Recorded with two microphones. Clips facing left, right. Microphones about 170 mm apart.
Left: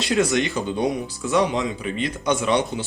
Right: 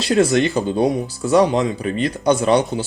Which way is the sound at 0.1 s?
35° right (ahead or behind).